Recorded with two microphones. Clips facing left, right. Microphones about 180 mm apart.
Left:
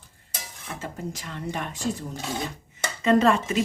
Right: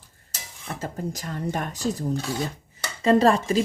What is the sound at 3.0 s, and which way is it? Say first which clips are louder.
Speech: right 2 dB; 35° right (ahead or behind).